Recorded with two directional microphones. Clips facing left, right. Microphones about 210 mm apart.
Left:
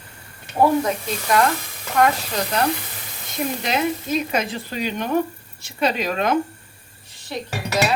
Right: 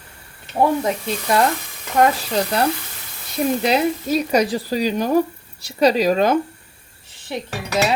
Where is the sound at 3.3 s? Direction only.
35° right (ahead or behind).